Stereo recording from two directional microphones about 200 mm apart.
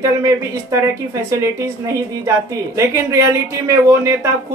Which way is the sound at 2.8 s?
15° right (ahead or behind).